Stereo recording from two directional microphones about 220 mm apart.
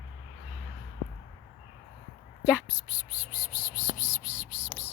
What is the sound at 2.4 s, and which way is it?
Whispering, 5° right (ahead or behind).